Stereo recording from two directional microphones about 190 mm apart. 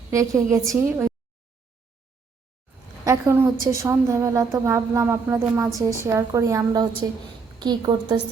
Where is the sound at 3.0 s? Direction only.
15° right (ahead or behind).